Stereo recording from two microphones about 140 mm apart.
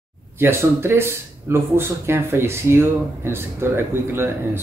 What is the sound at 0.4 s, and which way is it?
Speech, 15° right (ahead or behind).